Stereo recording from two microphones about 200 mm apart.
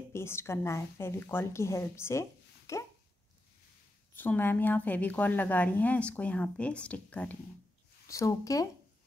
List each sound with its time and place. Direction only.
0.1 s a woman's voice: 10° left (ahead or behind)
4.1 s a woman's voice: 10° left (ahead or behind)